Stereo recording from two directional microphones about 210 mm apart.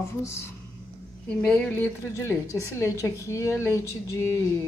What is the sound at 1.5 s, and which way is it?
A woman's voice, 10° left (ahead or behind).